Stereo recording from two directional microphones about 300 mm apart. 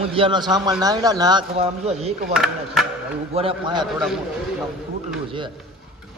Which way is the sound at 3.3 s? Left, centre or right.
Centre.